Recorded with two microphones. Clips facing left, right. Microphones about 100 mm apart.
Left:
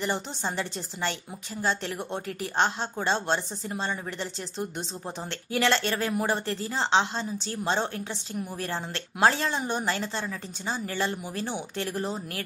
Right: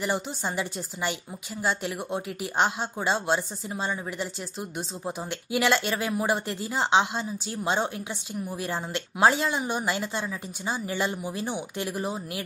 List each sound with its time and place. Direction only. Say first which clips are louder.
0.0 s speech: right 1 dB; 10° right (ahead or behind)